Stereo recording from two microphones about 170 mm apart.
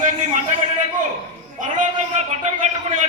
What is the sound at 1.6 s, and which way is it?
A man's voice, 45° right (ahead or behind).